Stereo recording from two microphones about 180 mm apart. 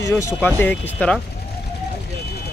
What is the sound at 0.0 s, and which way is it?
Speech, 15° left (ahead or behind).